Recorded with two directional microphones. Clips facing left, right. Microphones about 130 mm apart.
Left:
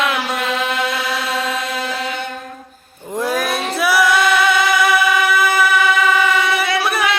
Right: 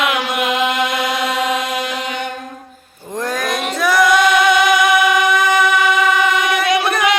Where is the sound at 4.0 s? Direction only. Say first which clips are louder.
Right 4 dB; 15° right (ahead or behind).